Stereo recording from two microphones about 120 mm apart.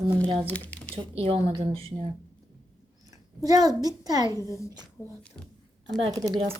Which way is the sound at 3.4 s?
35° right (ahead or behind).